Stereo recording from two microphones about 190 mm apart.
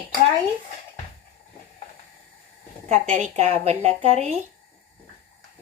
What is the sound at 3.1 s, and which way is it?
Speech, 40° right (ahead or behind).